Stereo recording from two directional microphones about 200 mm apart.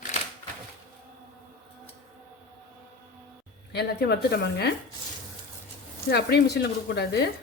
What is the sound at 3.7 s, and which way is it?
Speech, 55° left (ahead or behind).